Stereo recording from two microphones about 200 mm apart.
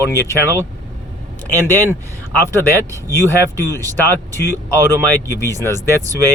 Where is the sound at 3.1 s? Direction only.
15° right (ahead or behind).